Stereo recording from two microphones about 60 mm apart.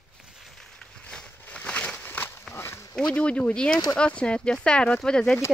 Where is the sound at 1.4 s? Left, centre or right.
Left.